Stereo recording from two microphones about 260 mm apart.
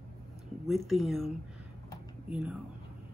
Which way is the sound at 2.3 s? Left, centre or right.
Centre.